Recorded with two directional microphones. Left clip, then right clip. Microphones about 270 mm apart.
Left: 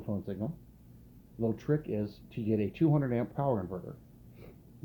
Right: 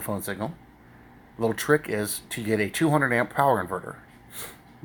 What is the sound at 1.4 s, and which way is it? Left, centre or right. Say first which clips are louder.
Speech: right 10 dB; centre.